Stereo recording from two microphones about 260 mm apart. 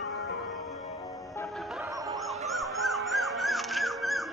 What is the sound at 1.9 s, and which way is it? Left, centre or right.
Music, centre.